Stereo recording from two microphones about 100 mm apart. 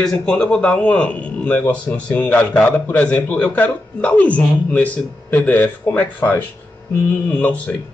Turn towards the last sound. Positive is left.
turn(degrees=15)  # may be behind; listen again after turning